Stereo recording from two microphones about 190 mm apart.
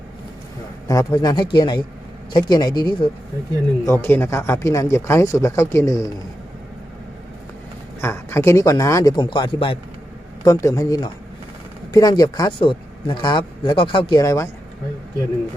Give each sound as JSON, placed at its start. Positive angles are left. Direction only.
{"t": 0.9, "sound": "speech", "side_deg": 20}
{"t": 3.8, "sound": "speech", "side_deg": 10}
{"t": 8.0, "sound": "speech", "side_deg": 10}